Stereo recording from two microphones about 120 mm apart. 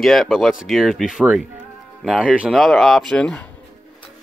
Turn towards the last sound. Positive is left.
turn(degrees=10)  # may be behind; listen again after turning